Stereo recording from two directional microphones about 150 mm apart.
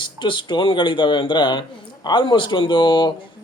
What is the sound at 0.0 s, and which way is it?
Speech, 30° left (ahead or behind).